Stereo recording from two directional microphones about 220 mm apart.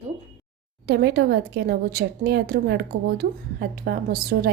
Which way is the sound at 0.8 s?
50° right (ahead or behind).